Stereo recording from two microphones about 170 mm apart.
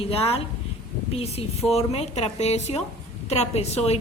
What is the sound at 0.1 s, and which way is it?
A woman's voice, 35° left (ahead or behind).